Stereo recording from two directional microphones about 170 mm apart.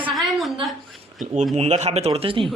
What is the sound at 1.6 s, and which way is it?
Speech, 40° right (ahead or behind).